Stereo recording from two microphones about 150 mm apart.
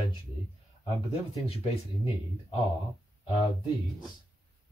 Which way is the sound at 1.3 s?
40° left (ahead or behind).